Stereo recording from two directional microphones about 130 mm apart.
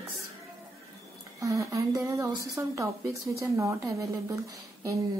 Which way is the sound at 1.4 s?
25° right (ahead or behind).